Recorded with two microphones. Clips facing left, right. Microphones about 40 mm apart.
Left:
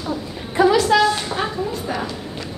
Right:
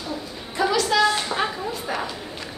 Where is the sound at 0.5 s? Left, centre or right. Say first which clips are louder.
Left 6 dB; centre.